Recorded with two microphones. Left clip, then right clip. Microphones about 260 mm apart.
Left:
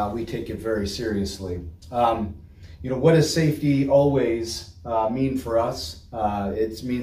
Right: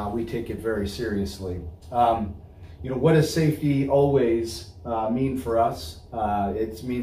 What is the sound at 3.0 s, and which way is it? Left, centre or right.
Speech, centre.